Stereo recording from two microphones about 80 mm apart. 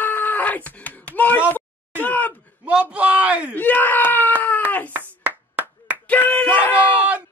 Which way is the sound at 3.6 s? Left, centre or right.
Left.